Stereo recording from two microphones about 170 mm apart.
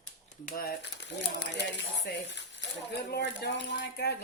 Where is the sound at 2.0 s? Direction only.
85° left.